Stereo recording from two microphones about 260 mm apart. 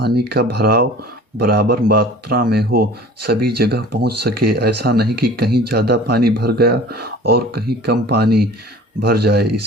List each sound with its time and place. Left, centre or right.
0.0 s speech: right